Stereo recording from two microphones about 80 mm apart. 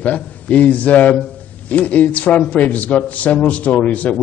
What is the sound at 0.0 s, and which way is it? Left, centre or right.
A man's voice, centre.